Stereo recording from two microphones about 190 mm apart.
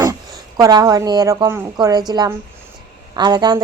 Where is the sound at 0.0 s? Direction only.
20° right (ahead or behind).